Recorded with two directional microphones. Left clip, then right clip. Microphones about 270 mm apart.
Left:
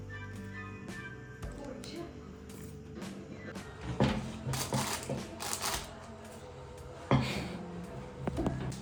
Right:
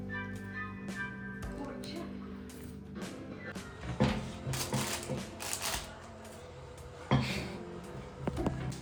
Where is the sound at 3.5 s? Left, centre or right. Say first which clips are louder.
Left 1 dB; centre.